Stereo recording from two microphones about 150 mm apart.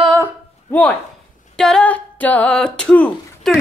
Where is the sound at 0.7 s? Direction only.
10° left (ahead or behind).